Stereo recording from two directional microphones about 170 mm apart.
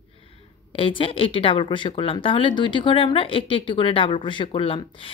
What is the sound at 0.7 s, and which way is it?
Speech, 30° left (ahead or behind).